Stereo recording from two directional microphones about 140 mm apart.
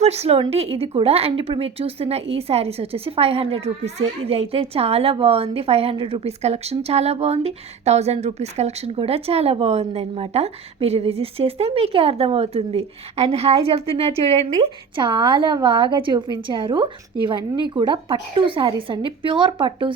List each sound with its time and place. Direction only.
0.0 s speech: 50° right (ahead or behind)